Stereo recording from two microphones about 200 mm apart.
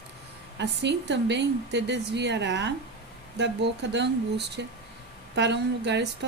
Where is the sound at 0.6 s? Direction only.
60° right (ahead or behind).